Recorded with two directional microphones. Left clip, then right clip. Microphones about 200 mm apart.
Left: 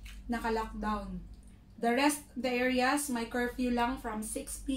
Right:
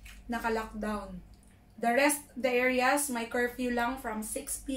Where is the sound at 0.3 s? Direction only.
5° right (ahead or behind).